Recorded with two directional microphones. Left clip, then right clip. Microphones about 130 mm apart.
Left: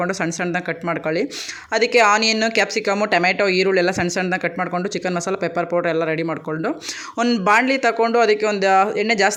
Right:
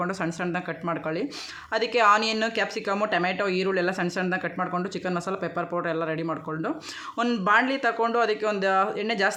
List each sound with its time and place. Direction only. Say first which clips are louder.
0.0 s speech: left 6 dB; 25° left (ahead or behind)
7.2 s speech: left 6 dB; 20° left (ahead or behind)
7.4 s speech: left 6 dB; 35° left (ahead or behind)